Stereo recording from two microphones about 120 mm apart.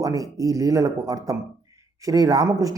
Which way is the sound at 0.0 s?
30° right (ahead or behind).